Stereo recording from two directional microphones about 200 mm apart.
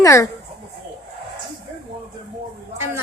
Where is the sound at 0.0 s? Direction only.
15° left (ahead or behind).